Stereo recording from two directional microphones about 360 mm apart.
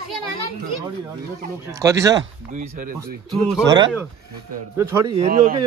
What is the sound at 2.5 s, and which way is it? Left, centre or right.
Chicken, right.